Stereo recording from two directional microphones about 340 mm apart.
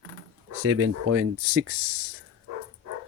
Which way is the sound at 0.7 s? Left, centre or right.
Right.